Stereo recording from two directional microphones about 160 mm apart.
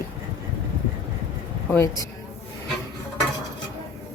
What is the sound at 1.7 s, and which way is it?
Speech, 15° left (ahead or behind).